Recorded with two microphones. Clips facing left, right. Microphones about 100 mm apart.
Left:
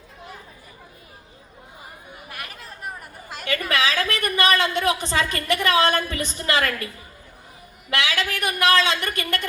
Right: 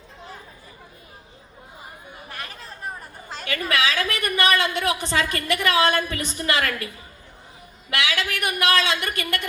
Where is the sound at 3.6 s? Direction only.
25° left (ahead or behind).